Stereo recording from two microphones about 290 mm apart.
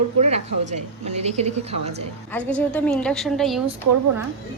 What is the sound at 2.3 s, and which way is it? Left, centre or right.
A woman's voice, centre.